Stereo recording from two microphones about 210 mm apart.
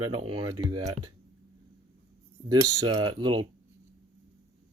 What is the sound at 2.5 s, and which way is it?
Speech, 20° right (ahead or behind).